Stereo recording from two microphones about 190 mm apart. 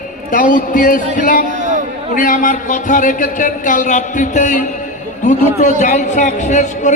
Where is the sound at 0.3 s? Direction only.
45° left (ahead or behind).